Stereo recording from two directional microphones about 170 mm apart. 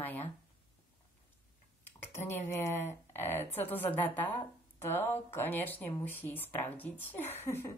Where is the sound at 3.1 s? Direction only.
15° left (ahead or behind).